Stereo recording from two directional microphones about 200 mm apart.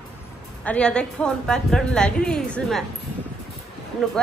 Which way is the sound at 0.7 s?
5° left (ahead or behind).